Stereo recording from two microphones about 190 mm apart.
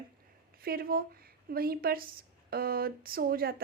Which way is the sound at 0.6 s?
50° right (ahead or behind).